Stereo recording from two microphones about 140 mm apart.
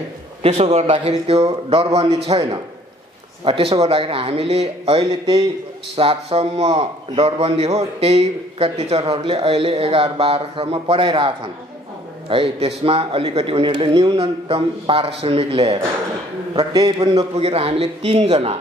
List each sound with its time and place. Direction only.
0.4 s a man's voice: 50° right (ahead or behind)
16.7 s a man's voice: 30° right (ahead or behind)
17.4 s a man's voice: 45° right (ahead or behind)